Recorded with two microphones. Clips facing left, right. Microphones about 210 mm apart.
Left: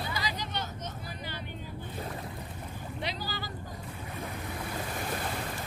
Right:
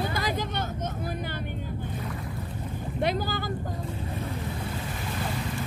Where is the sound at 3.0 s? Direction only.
50° right (ahead or behind).